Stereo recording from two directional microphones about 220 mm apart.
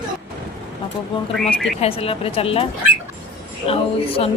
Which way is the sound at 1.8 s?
25° left (ahead or behind).